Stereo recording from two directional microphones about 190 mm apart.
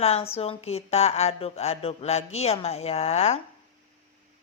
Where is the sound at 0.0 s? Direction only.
30° left (ahead or behind).